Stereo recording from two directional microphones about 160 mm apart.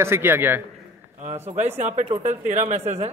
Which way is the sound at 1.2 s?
45° right (ahead or behind).